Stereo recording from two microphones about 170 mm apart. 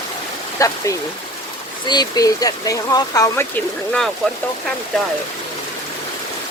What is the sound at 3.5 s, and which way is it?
Speech, 5° left (ahead or behind).